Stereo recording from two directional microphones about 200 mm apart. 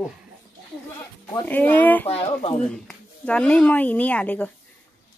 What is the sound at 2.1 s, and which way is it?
Speech, 30° left (ahead or behind).